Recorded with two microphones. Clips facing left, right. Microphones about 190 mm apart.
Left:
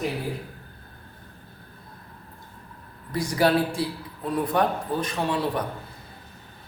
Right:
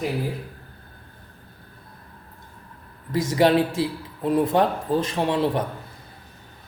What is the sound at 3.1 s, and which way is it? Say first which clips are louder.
A man's voice: right 3 dB; 20° right (ahead or behind).